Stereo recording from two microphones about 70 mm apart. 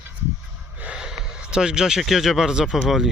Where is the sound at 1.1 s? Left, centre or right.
Centre.